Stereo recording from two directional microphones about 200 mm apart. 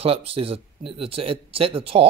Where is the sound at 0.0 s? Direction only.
30° right (ahead or behind).